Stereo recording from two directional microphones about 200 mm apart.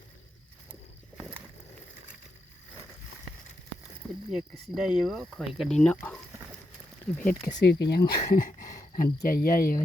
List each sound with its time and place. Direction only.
4.3 s speech: centre (ahead or behind)
7.2 s speech: 50° left (ahead or behind)